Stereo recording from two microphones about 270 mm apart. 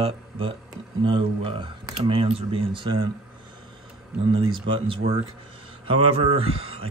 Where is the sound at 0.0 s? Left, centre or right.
Centre.